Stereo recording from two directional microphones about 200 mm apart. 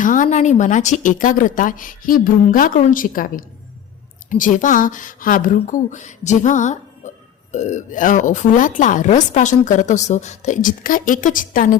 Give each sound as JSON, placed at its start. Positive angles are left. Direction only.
{"t": 0.0, "sound": "speech", "side_deg": 40}